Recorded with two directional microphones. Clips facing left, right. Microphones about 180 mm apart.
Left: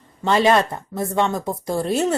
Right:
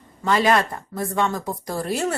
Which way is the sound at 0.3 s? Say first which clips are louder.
Left 2 dB; 25° left (ahead or behind).